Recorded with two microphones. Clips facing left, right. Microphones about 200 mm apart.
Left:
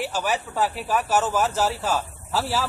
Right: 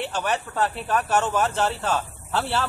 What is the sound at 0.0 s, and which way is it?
Speech, 5° left (ahead or behind).